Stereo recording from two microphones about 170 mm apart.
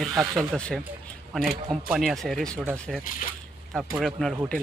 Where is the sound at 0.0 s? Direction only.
Centre (ahead or behind).